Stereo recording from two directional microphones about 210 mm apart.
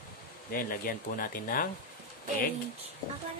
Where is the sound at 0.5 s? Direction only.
45° left (ahead or behind).